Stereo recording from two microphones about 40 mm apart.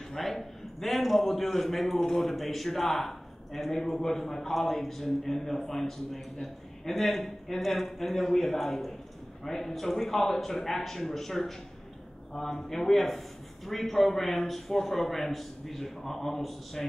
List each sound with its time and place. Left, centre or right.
0.1 s a man's voice: centre